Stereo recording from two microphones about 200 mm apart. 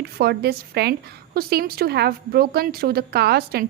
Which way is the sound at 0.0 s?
55° right (ahead or behind).